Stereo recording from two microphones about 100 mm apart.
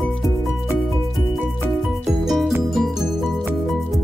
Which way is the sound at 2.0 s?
5° right (ahead or behind).